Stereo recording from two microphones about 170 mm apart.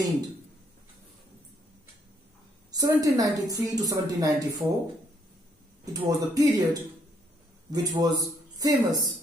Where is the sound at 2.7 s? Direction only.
20° right (ahead or behind).